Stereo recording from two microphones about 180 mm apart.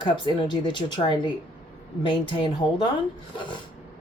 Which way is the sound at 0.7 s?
25° left (ahead or behind).